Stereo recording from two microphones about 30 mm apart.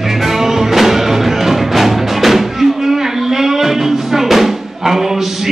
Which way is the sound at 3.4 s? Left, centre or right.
Centre.